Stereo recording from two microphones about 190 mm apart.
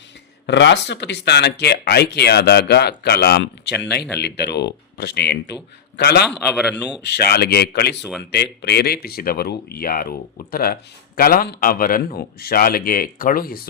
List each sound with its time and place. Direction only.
0.4 s speech: 65° left (ahead or behind)
6.2 s speech: 5° right (ahead or behind)
7.1 s speech: 55° left (ahead or behind)